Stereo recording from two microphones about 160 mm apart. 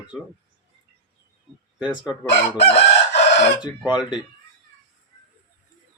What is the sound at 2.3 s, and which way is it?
Chicken, 90° left.